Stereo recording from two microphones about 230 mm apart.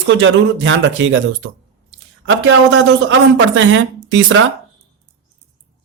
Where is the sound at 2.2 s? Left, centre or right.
Right.